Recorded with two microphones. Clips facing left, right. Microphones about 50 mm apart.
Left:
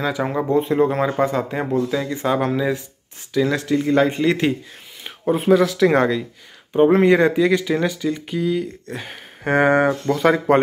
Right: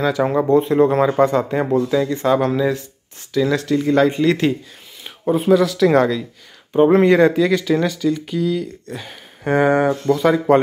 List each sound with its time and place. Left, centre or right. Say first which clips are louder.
0.2 s speech: right 5 dB; centre
2.0 s speech: right 3 dB; centre
5.3 s speech: right 1 dB; left
6.7 s speech: right 1 dB; centre; by 10.4 s left